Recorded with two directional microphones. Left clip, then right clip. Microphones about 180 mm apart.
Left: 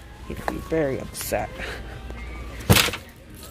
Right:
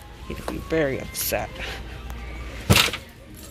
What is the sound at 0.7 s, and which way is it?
Speech, 10° left (ahead or behind).